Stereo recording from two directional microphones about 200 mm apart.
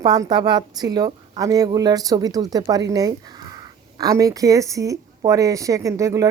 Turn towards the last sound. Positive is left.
turn(degrees=-15)  # may be behind; listen again after turning